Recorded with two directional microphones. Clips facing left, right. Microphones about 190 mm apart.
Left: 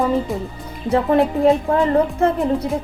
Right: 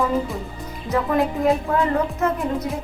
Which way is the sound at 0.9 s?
30° left (ahead or behind).